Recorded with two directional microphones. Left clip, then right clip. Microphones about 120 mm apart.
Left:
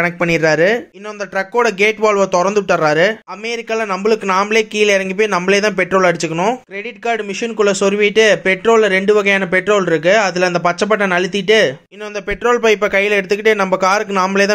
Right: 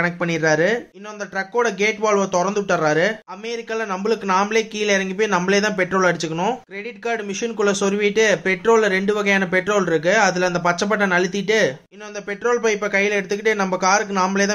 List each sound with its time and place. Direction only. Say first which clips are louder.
0.0 s speech: left 6 dB; 40° left (ahead or behind)